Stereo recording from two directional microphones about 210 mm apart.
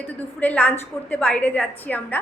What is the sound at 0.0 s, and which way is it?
A woman's voice, 5° left (ahead or behind).